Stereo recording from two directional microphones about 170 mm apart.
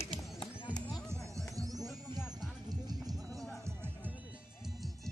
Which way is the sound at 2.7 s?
25° right (ahead or behind).